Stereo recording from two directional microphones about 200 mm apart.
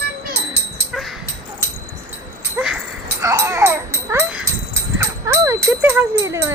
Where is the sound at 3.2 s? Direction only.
15° right (ahead or behind).